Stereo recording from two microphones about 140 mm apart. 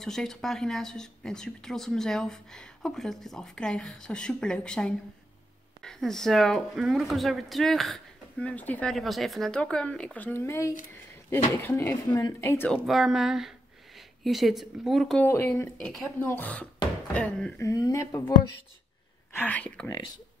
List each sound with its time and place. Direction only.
0.0 s speech: 5° left (ahead or behind)
12.7 s speech: centre (ahead or behind)
15.2 s speech: 15° left (ahead or behind)
17.6 s speech: 25° left (ahead or behind)
19.3 s speech: 10° left (ahead or behind)